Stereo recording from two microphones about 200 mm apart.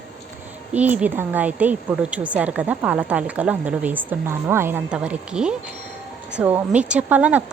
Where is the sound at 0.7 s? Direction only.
5° right (ahead or behind).